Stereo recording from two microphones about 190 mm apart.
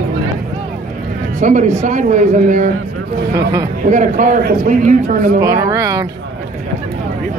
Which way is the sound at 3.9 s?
40° right (ahead or behind).